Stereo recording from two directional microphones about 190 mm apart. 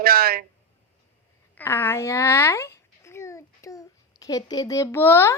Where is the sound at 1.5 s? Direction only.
10° left (ahead or behind).